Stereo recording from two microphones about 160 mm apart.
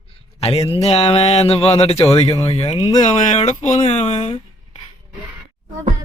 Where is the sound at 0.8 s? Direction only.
40° left (ahead or behind).